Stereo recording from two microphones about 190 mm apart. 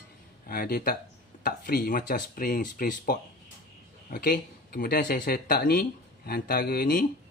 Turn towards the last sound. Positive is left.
turn(degrees=50)  # may be behind; listen again after turning